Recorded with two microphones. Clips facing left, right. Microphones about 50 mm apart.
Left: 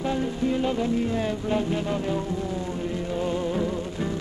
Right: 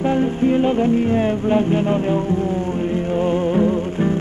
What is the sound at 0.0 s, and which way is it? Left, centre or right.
Music, right.